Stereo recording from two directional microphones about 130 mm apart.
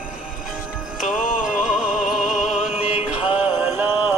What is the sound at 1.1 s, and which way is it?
Music, 90° left.